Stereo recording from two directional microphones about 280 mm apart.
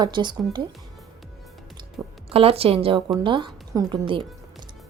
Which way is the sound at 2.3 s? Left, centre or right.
Right.